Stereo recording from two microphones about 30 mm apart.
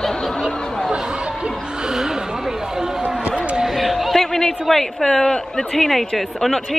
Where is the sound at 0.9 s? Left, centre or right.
Right.